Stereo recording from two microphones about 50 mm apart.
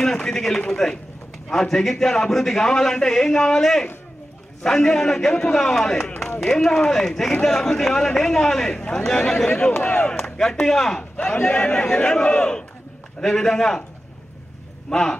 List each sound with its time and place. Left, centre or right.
0.0 s a man's voice: centre
11.4 s a man's voice: left
14.9 s a man's voice: centre